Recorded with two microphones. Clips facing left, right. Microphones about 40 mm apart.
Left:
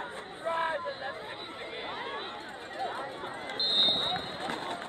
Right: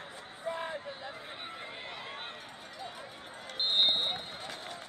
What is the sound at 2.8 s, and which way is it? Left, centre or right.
Chatter, left.